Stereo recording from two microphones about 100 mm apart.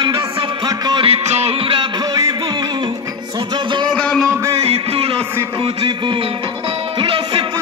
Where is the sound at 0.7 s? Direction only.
45° right (ahead or behind).